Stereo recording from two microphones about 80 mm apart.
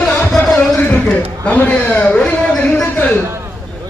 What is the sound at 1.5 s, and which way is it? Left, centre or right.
A man's voice, centre.